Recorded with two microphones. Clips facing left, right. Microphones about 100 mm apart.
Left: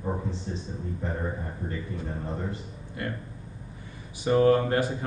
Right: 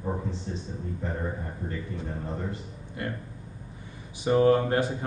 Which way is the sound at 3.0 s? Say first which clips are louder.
Even; 20° right (ahead or behind).